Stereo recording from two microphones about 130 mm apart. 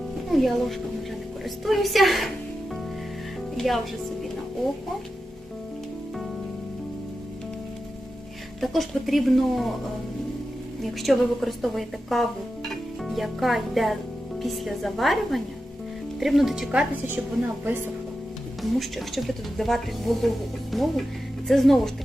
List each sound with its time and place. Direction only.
0.3 s speech: centre (ahead or behind)
3.6 s speech: centre (ahead or behind)
8.6 s speech: centre (ahead or behind)
10.9 s speech: centre (ahead or behind)
17.6 s speech: 15° right (ahead or behind)
18.8 s speech: centre (ahead or behind)